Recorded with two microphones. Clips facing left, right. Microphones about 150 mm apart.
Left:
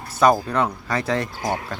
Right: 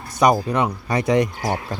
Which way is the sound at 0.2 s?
15° right (ahead or behind).